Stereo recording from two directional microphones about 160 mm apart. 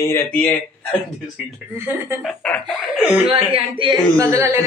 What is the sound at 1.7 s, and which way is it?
Speech, 15° right (ahead or behind).